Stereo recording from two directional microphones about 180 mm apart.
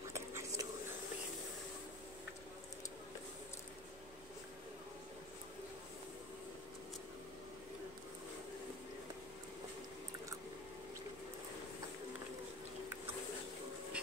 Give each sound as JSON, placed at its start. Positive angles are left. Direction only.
{"t": 0.1, "sound": "whispering", "side_deg": -15}